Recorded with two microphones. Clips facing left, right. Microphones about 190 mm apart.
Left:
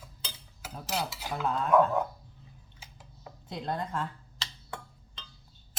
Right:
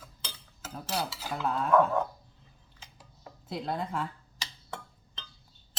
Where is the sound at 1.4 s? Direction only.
5° right (ahead or behind).